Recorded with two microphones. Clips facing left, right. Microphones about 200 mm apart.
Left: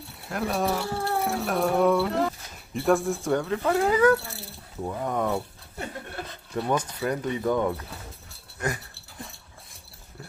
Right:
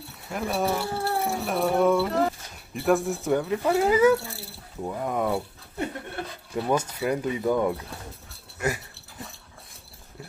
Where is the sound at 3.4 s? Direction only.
10° right (ahead or behind).